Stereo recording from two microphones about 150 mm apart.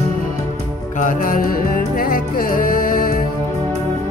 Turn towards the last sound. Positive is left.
turn(degrees=70)  # may be behind; listen again after turning